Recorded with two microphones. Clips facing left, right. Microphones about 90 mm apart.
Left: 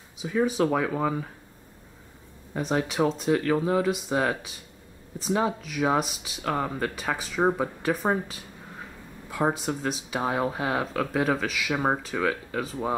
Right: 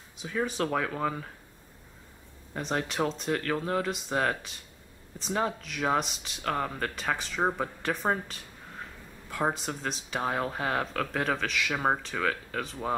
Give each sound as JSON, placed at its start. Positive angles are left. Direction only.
{"t": 0.2, "sound": "speech", "side_deg": 5}
{"t": 2.5, "sound": "speech", "side_deg": 5}